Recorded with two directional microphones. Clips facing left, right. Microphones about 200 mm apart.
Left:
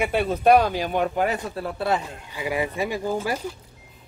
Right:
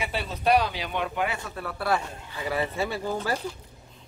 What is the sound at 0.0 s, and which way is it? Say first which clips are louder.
Speech: left 8 dB; 55° left (ahead or behind).